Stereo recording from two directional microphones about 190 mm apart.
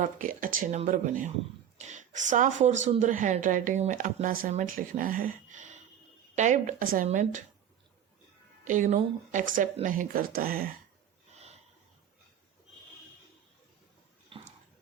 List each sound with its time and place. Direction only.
0.0 s speech: 45° right (ahead or behind)
8.6 s speech: 40° right (ahead or behind)
14.3 s bathtub: 30° right (ahead or behind)